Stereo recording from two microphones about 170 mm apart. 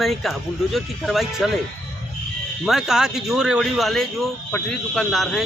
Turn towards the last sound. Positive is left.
turn(degrees=0)  # may be behind; listen again after turning